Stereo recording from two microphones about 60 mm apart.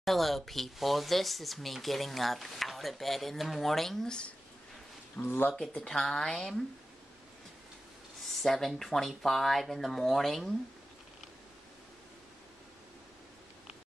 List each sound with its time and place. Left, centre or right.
0.0 s speech: centre
5.2 s speech: left
5.6 s speech: centre
8.3 s speech: centre